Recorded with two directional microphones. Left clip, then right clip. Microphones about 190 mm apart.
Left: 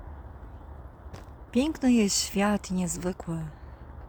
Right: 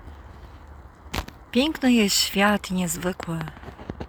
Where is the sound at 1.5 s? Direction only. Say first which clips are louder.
Right 4 dB; centre (ahead or behind).